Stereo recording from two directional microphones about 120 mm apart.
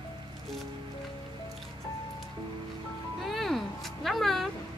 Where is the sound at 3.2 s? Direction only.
Centre (ahead or behind).